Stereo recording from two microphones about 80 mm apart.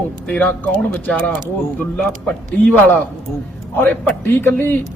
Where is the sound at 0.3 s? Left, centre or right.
Centre.